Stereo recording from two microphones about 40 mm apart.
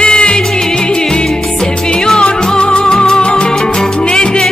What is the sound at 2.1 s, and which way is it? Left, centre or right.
Music, left.